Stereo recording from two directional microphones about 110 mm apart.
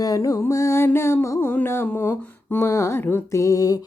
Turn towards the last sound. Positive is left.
turn(degrees=30)  # may be behind; listen again after turning